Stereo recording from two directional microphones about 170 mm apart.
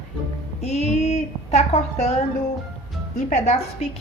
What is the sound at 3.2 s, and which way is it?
Speech, 45° left (ahead or behind).